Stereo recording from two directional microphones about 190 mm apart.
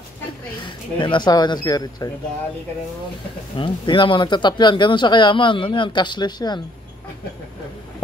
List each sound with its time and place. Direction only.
0.9 s speech: 25° left (ahead or behind)
3.5 s speech: 25° left (ahead or behind)